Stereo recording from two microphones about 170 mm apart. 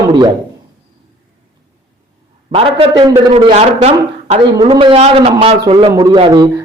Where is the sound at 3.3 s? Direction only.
40° right (ahead or behind).